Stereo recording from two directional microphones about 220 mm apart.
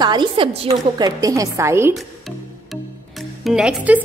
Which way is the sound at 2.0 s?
Centre (ahead or behind).